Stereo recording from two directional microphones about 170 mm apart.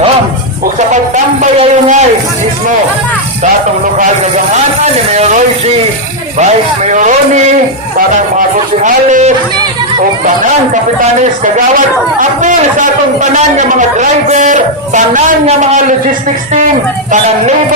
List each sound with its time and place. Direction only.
1.1 s a man's voice: 45° right (ahead or behind)
4.5 s a man's voice: 40° right (ahead or behind)
8.8 s a man's voice: 50° right (ahead or behind)
12.4 s a man's voice: 50° right (ahead or behind)